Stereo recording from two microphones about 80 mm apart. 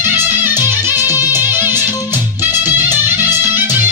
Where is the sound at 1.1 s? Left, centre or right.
Left.